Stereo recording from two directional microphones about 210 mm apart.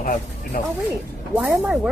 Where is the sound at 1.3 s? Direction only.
5° right (ahead or behind).